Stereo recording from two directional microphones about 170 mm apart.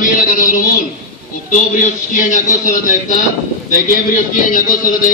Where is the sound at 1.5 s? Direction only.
50° left (ahead or behind).